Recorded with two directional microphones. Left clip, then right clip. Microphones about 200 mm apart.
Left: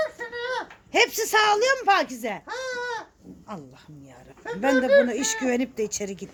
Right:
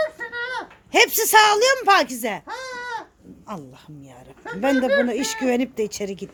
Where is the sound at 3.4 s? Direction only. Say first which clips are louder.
Right 4 dB; 30° right (ahead or behind).